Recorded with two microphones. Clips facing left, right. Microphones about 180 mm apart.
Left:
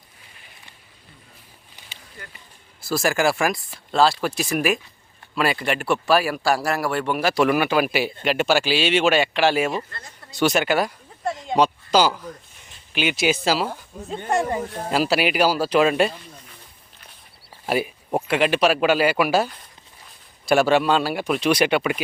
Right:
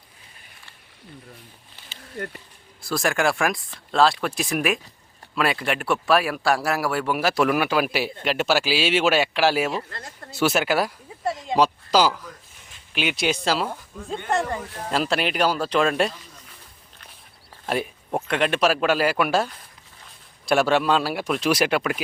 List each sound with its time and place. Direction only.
2.1 s speech: 55° right (ahead or behind)
2.8 s speech: centre (ahead or behind)
10.3 s a sound: 5° right (ahead or behind)
12.9 s speech: centre (ahead or behind)
17.7 s speech: 5° left (ahead or behind)